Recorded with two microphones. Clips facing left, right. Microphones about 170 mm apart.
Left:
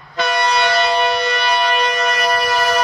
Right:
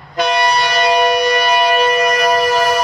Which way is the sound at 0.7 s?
15° right (ahead or behind).